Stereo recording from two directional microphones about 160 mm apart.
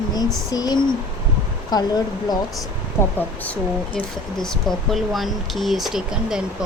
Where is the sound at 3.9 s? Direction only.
5° left (ahead or behind).